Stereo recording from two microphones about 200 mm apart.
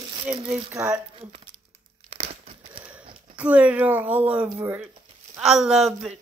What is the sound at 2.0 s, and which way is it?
Crumpling, 30° right (ahead or behind).